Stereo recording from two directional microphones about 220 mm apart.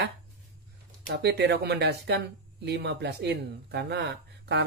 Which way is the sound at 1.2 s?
50° right (ahead or behind).